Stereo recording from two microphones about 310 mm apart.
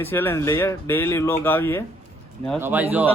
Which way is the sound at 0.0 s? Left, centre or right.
Centre.